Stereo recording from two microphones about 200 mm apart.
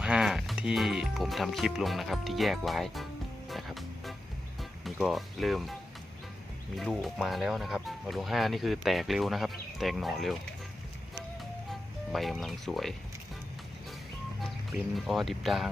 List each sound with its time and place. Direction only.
0.0 s speech: 5° right (ahead or behind)
3.5 s music: centre (ahead or behind)
4.8 s speech: centre (ahead or behind)
6.7 s speech: centre (ahead or behind)
11.7 s speech: centre (ahead or behind)
14.9 s speech: centre (ahead or behind)